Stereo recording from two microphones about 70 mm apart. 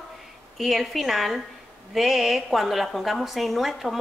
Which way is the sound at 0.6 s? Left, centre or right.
Centre.